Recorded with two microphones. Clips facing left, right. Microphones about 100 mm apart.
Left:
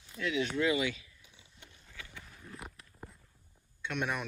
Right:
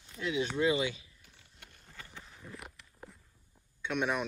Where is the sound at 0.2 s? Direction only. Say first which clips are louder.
Right 1 dB; 25° right (ahead or behind).